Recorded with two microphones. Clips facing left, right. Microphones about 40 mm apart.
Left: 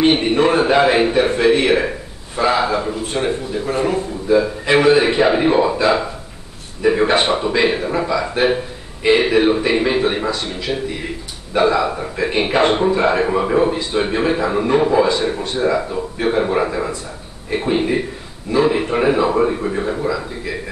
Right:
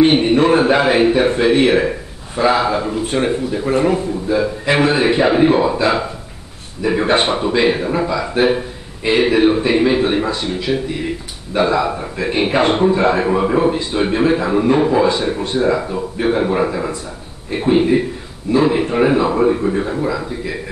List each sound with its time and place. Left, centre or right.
0.0 s a man's voice: centre
4.3 s a man's voice: centre